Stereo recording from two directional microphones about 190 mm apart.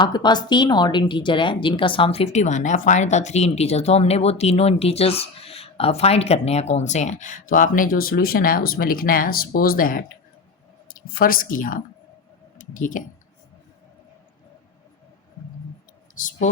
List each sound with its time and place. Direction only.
0.0 s a woman's voice: 20° left (ahead or behind); by 11.8 s 45° left (ahead or behind)
12.5 s clicking: 45° left (ahead or behind)